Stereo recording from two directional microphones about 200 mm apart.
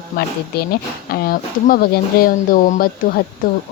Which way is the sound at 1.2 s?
45° left (ahead or behind).